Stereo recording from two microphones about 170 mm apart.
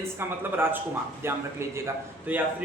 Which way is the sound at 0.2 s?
10° right (ahead or behind).